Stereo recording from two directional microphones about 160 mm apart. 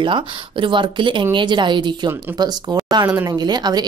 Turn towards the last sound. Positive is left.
turn(degrees=-25)  # may be behind; listen again after turning